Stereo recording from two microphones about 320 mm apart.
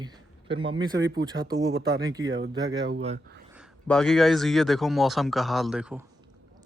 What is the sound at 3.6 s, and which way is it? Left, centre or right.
Speech, centre.